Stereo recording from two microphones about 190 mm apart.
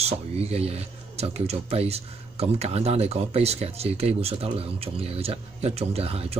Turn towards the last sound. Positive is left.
turn(degrees=-30)  # may be behind; listen again after turning